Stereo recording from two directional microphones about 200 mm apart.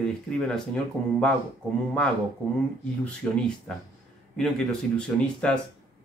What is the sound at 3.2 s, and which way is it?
Speech, 5° left (ahead or behind).